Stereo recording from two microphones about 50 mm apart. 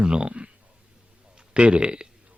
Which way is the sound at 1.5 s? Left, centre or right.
Centre.